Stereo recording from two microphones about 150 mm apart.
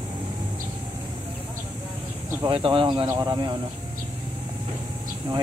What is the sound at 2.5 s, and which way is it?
Speech, 35° right (ahead or behind).